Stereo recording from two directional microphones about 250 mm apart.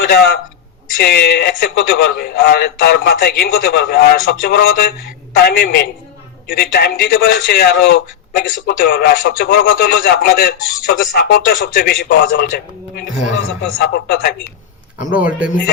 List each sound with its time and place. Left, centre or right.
0.1 s a man's voice: left
15.2 s a man's voice: centre